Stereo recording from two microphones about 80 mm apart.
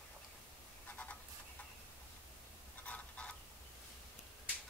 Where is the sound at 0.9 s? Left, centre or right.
Centre.